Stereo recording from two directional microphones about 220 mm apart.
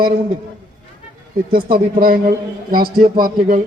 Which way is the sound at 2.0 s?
40° right (ahead or behind).